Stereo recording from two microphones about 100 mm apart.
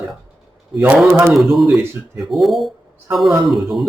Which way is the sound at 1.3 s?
Centre (ahead or behind).